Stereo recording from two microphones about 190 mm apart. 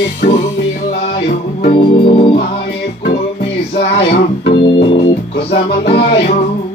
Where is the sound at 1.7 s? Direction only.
30° left (ahead or behind).